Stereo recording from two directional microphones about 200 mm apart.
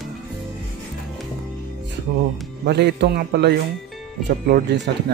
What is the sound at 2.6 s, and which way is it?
Speech, 55° right (ahead or behind).